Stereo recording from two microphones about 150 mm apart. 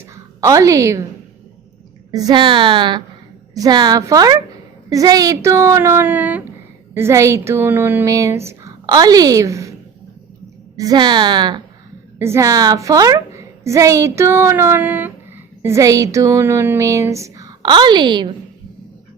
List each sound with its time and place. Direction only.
0.0 s a woman's voice: 20° right (ahead or behind)
2.1 s a woman's voice: 30° right (ahead or behind)
10.8 s a woman's voice: 25° right (ahead or behind)